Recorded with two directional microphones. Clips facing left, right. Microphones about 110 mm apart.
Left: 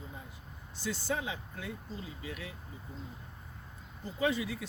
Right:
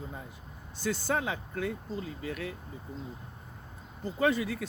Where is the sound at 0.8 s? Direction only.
50° right (ahead or behind).